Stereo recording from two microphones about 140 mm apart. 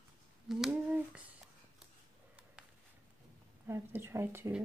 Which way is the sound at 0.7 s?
10° right (ahead or behind).